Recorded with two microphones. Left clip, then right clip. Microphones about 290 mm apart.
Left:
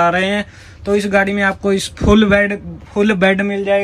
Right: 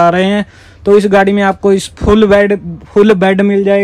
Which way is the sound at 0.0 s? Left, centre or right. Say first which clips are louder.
Right 5 dB; centre.